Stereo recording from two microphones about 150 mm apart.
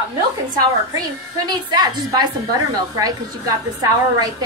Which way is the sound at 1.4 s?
30° right (ahead or behind).